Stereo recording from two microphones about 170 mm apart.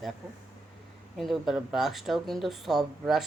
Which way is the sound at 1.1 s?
Centre (ahead or behind).